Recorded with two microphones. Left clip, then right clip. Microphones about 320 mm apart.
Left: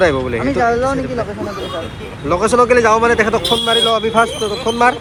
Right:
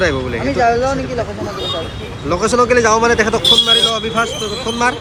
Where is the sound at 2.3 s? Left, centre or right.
Centre.